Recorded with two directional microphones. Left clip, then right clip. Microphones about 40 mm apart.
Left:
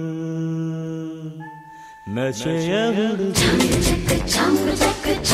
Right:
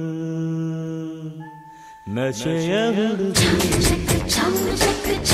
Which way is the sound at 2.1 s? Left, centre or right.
Left.